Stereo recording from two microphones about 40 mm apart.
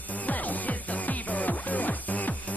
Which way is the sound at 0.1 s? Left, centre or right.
Left.